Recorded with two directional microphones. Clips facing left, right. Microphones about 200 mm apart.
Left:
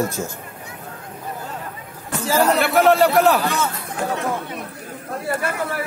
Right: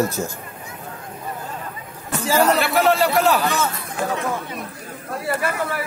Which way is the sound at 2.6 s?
55° left (ahead or behind).